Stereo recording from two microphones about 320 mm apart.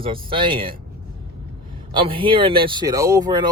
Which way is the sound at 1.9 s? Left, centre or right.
Centre.